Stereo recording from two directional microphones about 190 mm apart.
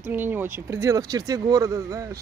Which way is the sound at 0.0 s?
10° right (ahead or behind).